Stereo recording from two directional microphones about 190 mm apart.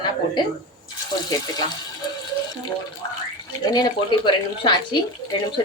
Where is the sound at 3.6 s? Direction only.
20° left (ahead or behind).